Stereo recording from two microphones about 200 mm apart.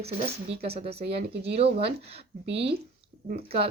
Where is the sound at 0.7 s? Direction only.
30° right (ahead or behind).